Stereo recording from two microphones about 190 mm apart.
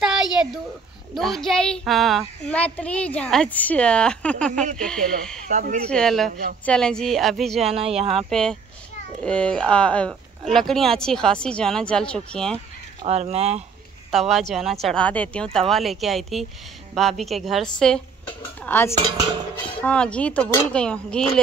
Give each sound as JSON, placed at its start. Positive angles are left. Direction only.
{"t": 0.0, "sound": "a sound", "side_deg": -5}
{"t": 1.1, "sound": "a child's voice", "side_deg": 0}
{"t": 5.5, "sound": "speech", "side_deg": -40}
{"t": 5.9, "sound": "a child's voice", "side_deg": 5}
{"t": 7.6, "sound": "speech", "side_deg": -30}
{"t": 8.3, "sound": "a child's voice", "side_deg": 5}
{"t": 13.0, "sound": "speech", "side_deg": -35}
{"t": 14.1, "sound": "a child's voice", "side_deg": 0}
{"t": 18.6, "sound": "dishes", "side_deg": 10}
{"t": 19.8, "sound": "a child's voice", "side_deg": 5}